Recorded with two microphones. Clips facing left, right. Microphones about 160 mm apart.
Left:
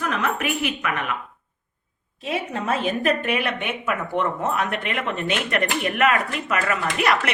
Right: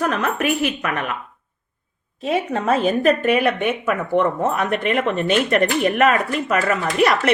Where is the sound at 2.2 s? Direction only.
40° right (ahead or behind).